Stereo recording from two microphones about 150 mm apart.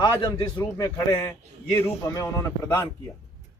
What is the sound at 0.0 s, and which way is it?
A man's voice, 30° left (ahead or behind).